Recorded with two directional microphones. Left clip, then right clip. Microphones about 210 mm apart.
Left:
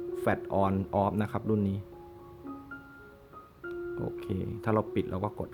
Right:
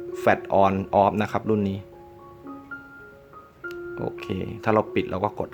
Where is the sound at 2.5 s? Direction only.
40° left (ahead or behind).